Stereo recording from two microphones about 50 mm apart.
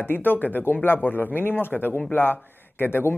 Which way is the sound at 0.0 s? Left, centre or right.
Left.